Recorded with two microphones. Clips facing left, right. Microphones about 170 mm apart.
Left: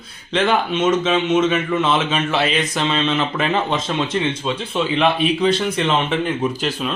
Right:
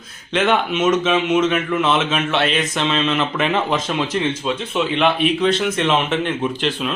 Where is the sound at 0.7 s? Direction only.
30° left (ahead or behind).